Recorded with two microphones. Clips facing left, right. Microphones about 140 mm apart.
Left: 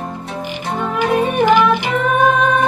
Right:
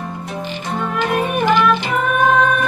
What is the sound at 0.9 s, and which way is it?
Music, 15° left (ahead or behind).